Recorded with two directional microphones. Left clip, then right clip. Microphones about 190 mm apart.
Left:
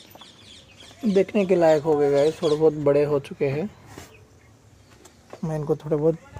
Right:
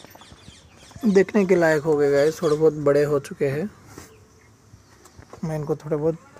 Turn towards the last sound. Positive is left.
turn(degrees=15)  # may be behind; listen again after turning